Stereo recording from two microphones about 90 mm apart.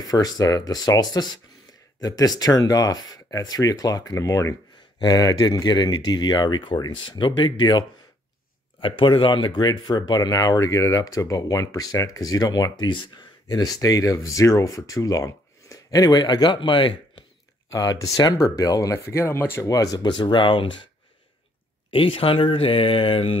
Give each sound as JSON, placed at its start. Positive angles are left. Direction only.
{"t": 0.0, "sound": "speech", "side_deg": 45}
{"t": 8.8, "sound": "speech", "side_deg": 70}
{"t": 13.5, "sound": "speech", "side_deg": 45}
{"t": 17.6, "sound": "speech", "side_deg": 40}
{"t": 19.6, "sound": "speech", "side_deg": 40}
{"t": 21.9, "sound": "speech", "side_deg": 85}